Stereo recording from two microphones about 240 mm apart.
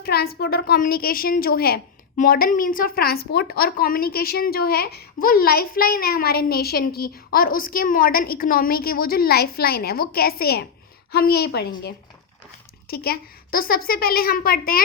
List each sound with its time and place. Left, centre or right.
0.0 s a child's voice: left
12.9 s a child's voice: left